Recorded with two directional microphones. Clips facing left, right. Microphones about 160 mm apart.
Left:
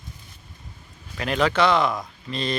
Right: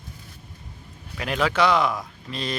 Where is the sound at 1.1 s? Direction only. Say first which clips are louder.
Left 2 dB; 5° right (ahead or behind).